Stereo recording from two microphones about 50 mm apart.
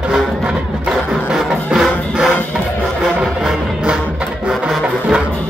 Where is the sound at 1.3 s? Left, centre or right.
Centre.